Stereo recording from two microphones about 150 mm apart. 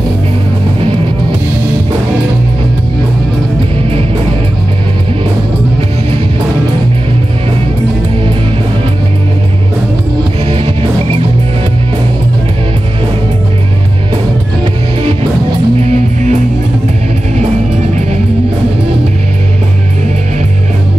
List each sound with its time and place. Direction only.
10.4 s music: 40° right (ahead or behind)
15.8 s music: 50° right (ahead or behind)